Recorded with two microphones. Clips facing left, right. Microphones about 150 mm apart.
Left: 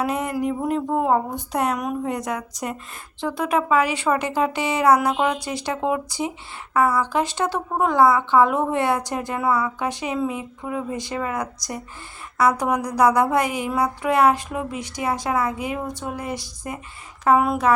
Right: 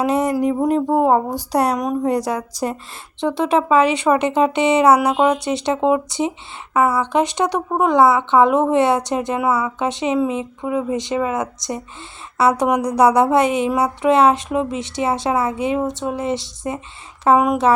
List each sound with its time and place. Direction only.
0.0 s speech: 35° right (ahead or behind)
3.2 s a woman's voice: 25° right (ahead or behind)